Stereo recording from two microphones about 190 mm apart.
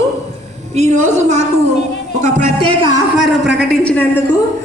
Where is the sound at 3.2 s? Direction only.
Centre (ahead or behind).